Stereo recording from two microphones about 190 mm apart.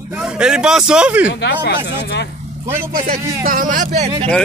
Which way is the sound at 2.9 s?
45° right (ahead or behind).